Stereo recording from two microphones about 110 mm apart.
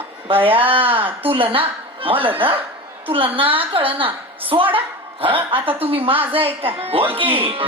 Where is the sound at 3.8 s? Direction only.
55° right (ahead or behind).